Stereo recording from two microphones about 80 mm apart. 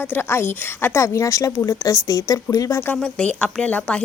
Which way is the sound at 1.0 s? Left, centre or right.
Left.